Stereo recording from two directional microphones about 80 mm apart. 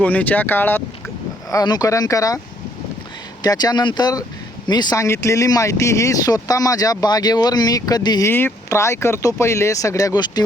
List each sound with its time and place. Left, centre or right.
0.0 s speech: centre
1.6 s speech: left
1.9 s speech: left
3.4 s speech: left
4.9 s speech: left
8.2 s speech: left